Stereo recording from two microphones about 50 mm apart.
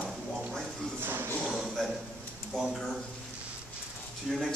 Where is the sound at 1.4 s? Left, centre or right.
Centre.